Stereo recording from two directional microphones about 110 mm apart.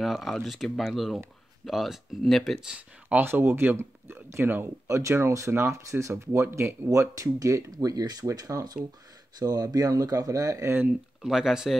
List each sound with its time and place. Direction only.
0.0 s speech: centre (ahead or behind)
2.7 s speech: 15° right (ahead or behind)
10.9 s speech: 5° right (ahead or behind)